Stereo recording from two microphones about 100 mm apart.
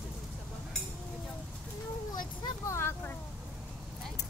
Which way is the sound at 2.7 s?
25° left (ahead or behind).